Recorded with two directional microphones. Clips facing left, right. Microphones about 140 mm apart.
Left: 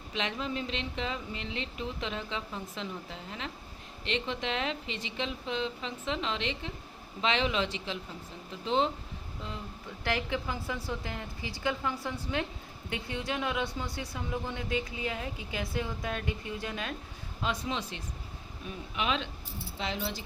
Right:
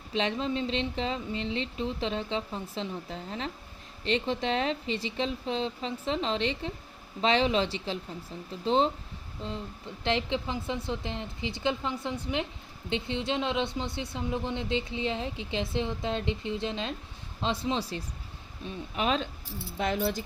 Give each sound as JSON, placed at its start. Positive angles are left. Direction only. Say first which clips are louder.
{"t": 0.1, "sound": "speech", "louder": "right 5 dB", "side_deg": -30}
{"t": 10.0, "sound": "speech", "louder": "right 3 dB", "side_deg": -25}
{"t": 19.8, "sound": "speech", "louder": "right 7 dB", "side_deg": -50}